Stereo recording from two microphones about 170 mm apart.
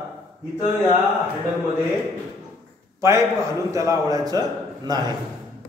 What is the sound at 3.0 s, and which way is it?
A man's voice, 15° right (ahead or behind).